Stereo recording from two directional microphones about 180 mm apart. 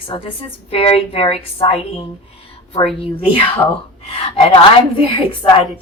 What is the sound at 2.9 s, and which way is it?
A woman's voice, 30° left (ahead or behind).